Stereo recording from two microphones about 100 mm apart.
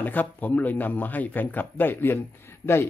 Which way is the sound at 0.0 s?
15° left (ahead or behind).